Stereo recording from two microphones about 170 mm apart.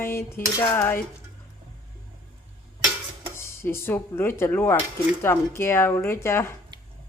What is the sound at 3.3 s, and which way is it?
Speech, 15° left (ahead or behind).